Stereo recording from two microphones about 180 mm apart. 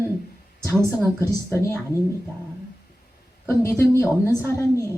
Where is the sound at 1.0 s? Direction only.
15° right (ahead or behind).